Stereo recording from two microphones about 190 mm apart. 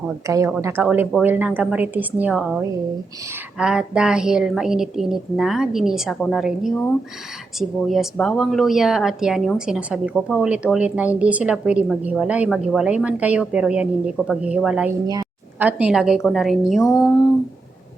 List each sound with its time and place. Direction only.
0.3 s a woman's voice: 15° right (ahead or behind)
15.0 s a woman's voice: 20° right (ahead or behind)
15.5 s a woman's voice: 10° right (ahead or behind)